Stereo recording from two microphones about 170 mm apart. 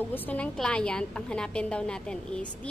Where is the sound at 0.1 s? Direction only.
10° left (ahead or behind).